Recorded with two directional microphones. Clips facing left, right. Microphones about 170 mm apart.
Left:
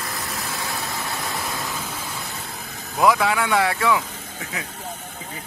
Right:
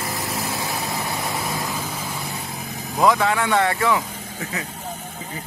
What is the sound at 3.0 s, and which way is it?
Speech, 5° left (ahead or behind).